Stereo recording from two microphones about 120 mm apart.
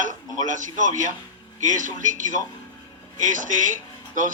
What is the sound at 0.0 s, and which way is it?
A man's voice, 90° right.